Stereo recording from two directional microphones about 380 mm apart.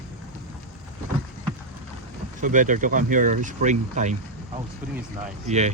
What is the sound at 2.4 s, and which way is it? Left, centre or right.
Speech, centre.